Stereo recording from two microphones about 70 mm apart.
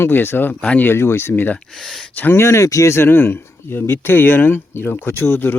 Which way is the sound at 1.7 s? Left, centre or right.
Centre.